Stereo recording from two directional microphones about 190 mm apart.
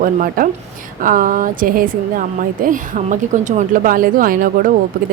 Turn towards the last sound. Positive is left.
turn(degrees=-50)  # may be behind; listen again after turning